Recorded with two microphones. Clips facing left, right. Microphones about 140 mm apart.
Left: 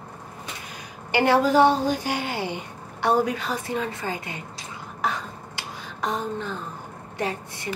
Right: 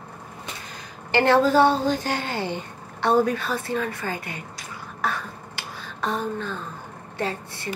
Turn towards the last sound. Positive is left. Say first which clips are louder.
# even
turn(degrees=15)  # may be behind; listen again after turning